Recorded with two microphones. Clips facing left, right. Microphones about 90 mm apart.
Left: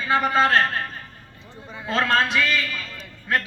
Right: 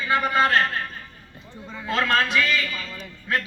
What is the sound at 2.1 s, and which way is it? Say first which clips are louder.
Speech: even; 30° left (ahead or behind).